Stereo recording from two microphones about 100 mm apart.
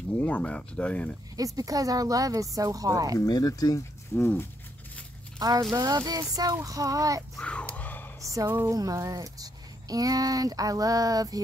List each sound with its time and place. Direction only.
0.2 s speech: 15° left (ahead or behind)
1.3 s speech: 35° right (ahead or behind)
3.2 s speech: 40° left (ahead or behind)
4.1 s speech: 25° left (ahead or behind)
5.8 s speech: 40° right (ahead or behind)
7.3 s a sound: 10° left (ahead or behind)
8.3 s speech: 30° right (ahead or behind)